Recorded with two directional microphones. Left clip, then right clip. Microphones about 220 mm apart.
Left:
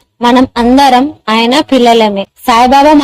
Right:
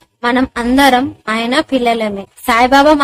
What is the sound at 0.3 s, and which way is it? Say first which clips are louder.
Speech: left 7 dB; 20° left (ahead or behind).